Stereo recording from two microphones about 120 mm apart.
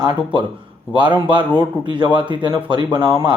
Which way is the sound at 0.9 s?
40° right (ahead or behind).